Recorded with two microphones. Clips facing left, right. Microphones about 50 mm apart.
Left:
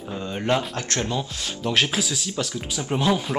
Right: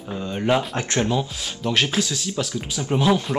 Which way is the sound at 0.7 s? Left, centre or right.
Centre.